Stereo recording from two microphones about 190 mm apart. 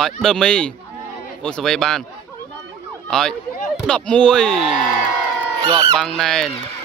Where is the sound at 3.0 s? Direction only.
5° left (ahead or behind).